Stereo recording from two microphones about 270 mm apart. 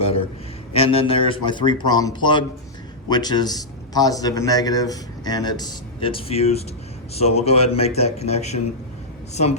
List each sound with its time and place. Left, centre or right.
0.7 s a man's voice: left